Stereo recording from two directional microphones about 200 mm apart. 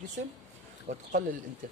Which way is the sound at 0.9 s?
35° right (ahead or behind).